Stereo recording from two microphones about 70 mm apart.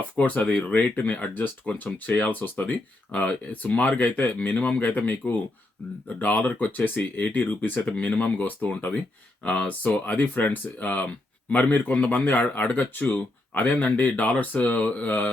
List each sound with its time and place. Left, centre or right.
0.2 s speech: centre